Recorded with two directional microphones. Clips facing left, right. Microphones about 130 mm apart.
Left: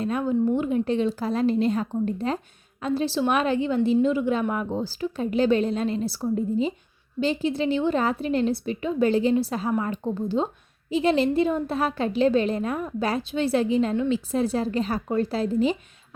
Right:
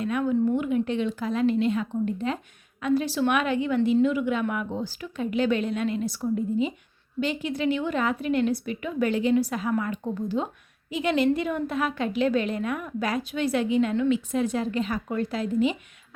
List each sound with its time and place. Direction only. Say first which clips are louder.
0.0 s a woman's voice: left 1 dB; 35° left (ahead or behind)